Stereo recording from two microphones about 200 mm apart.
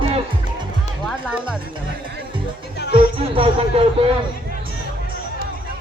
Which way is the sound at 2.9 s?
25° right (ahead or behind).